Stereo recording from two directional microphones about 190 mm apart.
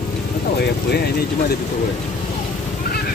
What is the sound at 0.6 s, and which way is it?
Speech, 60° left (ahead or behind).